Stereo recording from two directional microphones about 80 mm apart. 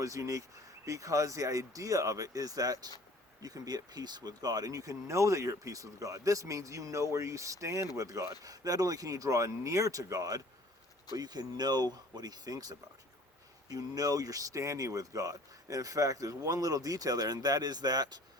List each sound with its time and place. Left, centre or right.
0.0 s speech: right
11.2 s speech: right